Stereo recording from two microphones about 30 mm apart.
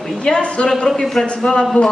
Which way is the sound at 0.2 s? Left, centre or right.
Left.